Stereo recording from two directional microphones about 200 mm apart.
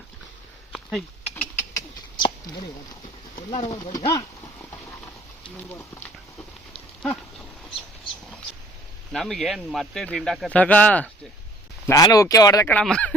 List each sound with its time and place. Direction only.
0.7 s a sound: centre (ahead or behind)
1.7 s a sound: 25° left (ahead or behind)
3.5 s speech: 30° left (ahead or behind)
3.9 s speech: 20° left (ahead or behind)
5.7 s speech: 15° left (ahead or behind)
9.1 s speech: centre (ahead or behind)